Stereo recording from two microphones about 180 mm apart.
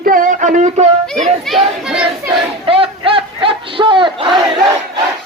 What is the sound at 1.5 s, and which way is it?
Crowd, centre (ahead or behind).